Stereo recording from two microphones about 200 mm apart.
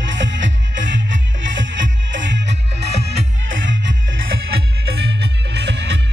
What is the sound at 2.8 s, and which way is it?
Music, 55° right (ahead or behind).